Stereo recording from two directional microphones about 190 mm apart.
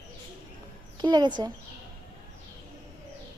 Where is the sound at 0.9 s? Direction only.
25° right (ahead or behind).